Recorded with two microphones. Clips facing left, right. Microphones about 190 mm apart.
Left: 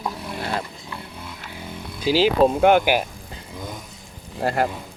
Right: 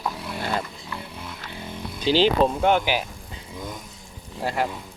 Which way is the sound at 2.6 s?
55° left (ahead or behind).